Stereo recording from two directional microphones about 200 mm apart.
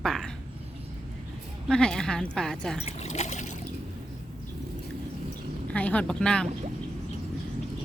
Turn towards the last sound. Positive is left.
turn(degrees=5)  # may be behind; listen again after turning